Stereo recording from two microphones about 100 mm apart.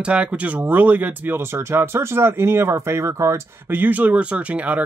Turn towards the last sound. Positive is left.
turn(degrees=-15)  # may be behind; listen again after turning